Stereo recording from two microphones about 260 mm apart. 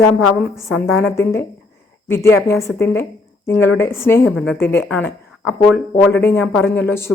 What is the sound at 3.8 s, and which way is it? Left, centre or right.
Speech, centre.